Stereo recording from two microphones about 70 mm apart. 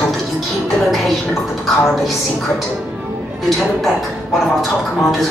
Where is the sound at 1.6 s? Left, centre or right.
Centre.